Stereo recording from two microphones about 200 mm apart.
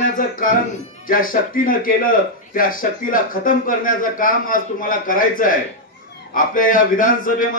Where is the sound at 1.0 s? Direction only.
45° left (ahead or behind).